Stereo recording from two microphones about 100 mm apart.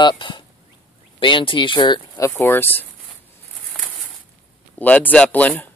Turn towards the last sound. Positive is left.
turn(degrees=15)  # may be behind; listen again after turning